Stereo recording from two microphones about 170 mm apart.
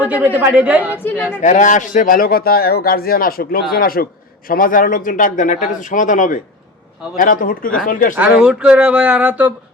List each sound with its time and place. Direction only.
0.0 s a man's voice: 10° right (ahead or behind)
1.4 s a man's voice: 45° left (ahead or behind)
8.1 s speech: 5° right (ahead or behind)